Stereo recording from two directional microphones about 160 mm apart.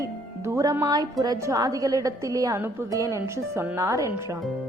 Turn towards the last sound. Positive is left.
turn(degrees=-20)  # may be behind; listen again after turning